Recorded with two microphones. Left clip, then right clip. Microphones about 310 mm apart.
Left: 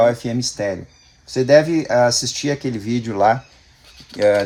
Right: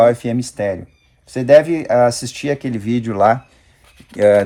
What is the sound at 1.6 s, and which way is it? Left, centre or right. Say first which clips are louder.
Speech: right 2 dB; right.